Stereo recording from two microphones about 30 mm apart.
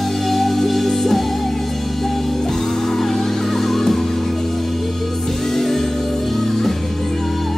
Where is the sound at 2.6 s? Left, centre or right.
Centre.